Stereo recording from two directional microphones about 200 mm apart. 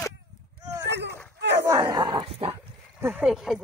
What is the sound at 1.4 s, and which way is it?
Battle cry, 60° right (ahead or behind).